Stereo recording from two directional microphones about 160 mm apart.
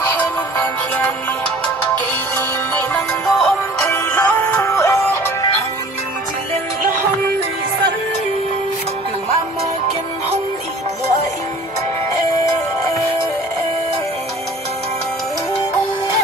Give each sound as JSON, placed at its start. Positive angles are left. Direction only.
{"t": 0.1, "sound": "music", "side_deg": 10}
{"t": 2.9, "sound": "music", "side_deg": 5}